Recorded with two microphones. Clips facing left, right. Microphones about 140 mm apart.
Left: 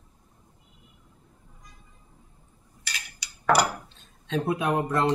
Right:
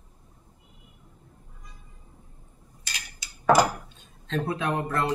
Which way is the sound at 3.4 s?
15° right (ahead or behind).